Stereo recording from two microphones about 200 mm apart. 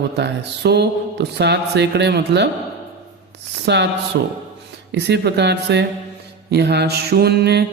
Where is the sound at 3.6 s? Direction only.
60° right (ahead or behind).